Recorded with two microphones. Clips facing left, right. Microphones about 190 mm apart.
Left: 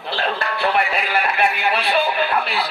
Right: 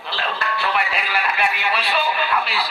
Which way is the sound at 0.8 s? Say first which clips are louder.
Left 3 dB; 50° left (ahead or behind).